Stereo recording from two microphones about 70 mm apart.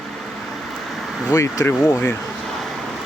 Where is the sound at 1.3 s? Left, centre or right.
Left.